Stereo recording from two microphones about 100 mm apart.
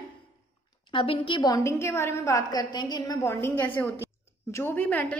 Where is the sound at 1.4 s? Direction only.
35° left (ahead or behind).